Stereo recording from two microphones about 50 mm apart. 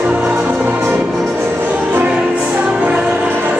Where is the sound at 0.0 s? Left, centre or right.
Right.